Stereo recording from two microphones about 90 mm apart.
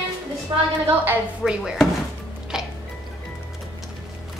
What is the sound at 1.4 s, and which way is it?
Speech, 5° right (ahead or behind).